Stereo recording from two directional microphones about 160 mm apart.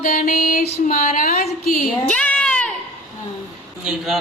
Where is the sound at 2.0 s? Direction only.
5° left (ahead or behind).